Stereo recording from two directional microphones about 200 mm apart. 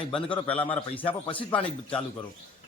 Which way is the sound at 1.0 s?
25° left (ahead or behind).